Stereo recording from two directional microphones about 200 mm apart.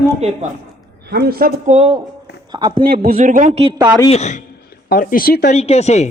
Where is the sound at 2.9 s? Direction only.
45° right (ahead or behind).